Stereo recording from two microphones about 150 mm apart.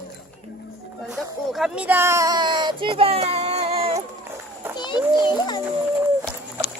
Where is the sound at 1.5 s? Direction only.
5° right (ahead or behind); by 4.0 s 40° right (ahead or behind).